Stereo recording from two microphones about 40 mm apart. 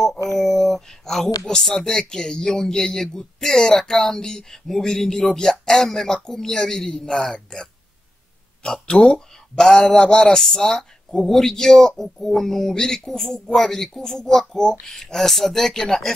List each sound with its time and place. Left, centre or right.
0.0 s a sound: centre
1.4 s speech: centre
8.8 s speech: left
9.6 s speech: centre
15.1 s speech: centre